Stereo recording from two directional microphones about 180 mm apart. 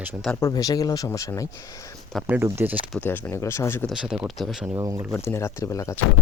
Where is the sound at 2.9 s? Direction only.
10° left (ahead or behind).